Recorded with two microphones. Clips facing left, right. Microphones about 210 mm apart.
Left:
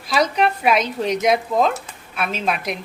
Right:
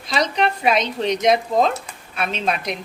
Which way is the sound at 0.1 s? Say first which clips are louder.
Left 2 dB; 5° left (ahead or behind).